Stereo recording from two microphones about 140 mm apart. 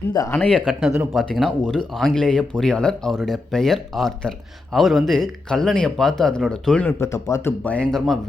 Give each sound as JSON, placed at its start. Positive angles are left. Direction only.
{"t": 0.1, "sound": "speech", "side_deg": 25}
{"t": 0.3, "sound": "speech", "side_deg": 10}
{"t": 0.6, "sound": "speech", "side_deg": -5}
{"t": 7.6, "sound": "speech", "side_deg": 10}